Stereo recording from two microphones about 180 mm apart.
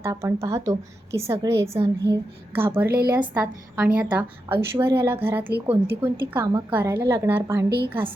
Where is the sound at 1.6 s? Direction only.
35° right (ahead or behind).